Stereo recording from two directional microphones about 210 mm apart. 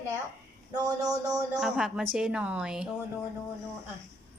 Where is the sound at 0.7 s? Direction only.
15° right (ahead or behind).